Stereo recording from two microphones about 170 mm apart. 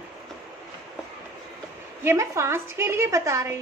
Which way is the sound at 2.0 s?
15° right (ahead or behind).